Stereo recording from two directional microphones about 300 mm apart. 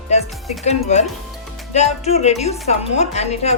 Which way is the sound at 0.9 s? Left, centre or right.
Left.